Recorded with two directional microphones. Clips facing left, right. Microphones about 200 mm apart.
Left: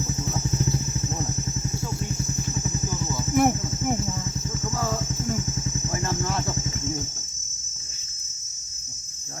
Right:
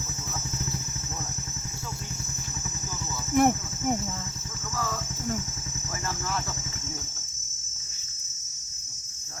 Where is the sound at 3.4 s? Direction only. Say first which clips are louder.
Left 1 dB; 5° left (ahead or behind).